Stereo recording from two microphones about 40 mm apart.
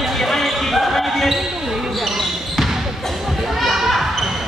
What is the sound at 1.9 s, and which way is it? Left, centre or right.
Basketball bounce, centre.